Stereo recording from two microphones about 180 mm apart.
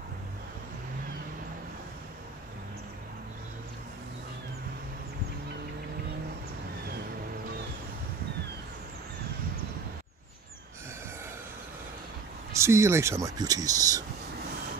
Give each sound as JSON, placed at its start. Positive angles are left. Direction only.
{"t": 12.5, "sound": "speech", "side_deg": -15}